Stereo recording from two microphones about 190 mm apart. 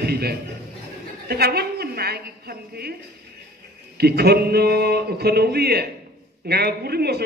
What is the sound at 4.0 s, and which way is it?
A man's voice, 55° right (ahead or behind).